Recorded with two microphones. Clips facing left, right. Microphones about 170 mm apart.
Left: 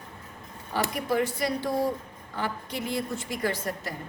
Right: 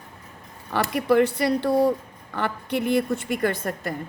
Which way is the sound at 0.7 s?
65° right (ahead or behind).